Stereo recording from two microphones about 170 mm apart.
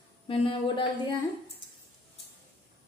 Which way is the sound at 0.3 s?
30° left (ahead or behind).